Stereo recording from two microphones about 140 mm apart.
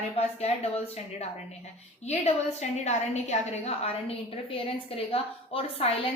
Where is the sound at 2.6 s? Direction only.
55° left (ahead or behind).